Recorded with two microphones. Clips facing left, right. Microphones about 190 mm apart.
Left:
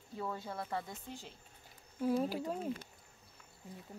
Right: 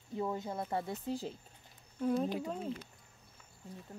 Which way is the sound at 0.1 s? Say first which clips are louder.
Right 4 dB; 20° right (ahead or behind).